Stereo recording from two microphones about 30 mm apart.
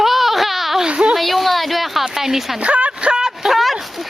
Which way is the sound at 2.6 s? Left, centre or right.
Right.